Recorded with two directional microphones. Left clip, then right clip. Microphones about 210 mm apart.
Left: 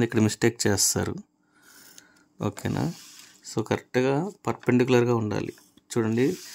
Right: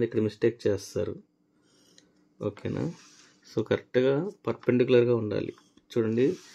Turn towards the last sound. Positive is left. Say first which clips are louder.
# left 1 dB
turn(degrees=20)  # may be behind; listen again after turning